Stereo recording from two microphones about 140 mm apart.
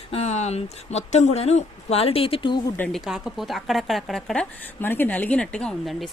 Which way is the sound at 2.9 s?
Centre (ahead or behind).